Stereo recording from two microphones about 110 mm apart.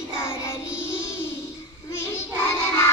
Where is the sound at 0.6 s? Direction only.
10° right (ahead or behind).